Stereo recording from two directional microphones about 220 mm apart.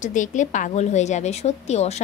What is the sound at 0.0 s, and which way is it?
A woman's voice, 35° left (ahead or behind).